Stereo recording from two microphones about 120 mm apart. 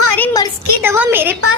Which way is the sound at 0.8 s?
20° right (ahead or behind).